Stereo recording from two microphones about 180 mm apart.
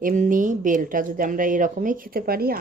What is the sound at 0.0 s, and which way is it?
Speech, 50° right (ahead or behind).